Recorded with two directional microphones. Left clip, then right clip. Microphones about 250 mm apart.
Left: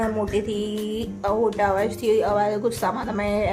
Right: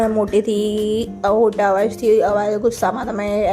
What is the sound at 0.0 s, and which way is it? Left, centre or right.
A woman's voice, right.